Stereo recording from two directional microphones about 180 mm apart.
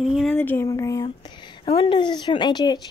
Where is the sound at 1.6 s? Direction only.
30° left (ahead or behind).